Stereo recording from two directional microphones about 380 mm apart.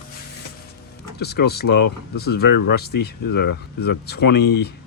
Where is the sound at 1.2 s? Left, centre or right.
Left.